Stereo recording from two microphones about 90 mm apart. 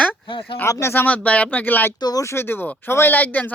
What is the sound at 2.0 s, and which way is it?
Speech, 50° left (ahead or behind).